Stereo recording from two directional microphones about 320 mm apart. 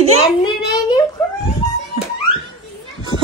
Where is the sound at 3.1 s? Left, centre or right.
Centre.